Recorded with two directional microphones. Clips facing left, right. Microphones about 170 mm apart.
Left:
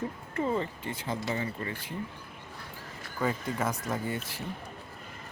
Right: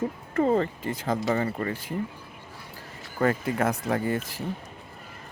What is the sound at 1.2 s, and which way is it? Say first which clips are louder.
Speech: right 8 dB; 60° right (ahead or behind).